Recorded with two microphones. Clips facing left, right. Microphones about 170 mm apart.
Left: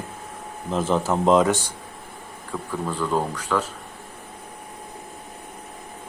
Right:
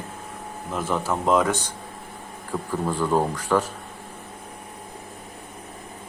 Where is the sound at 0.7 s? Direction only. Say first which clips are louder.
Left 4 dB; 25° left (ahead or behind).